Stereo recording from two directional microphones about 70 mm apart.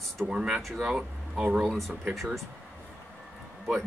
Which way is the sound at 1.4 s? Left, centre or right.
Centre.